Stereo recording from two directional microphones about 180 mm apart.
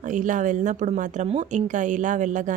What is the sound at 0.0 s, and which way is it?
A woman's voice, 45° right (ahead or behind).